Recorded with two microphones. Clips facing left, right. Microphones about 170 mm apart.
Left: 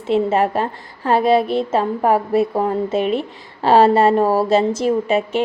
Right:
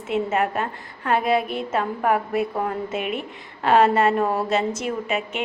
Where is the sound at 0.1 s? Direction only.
30° left (ahead or behind).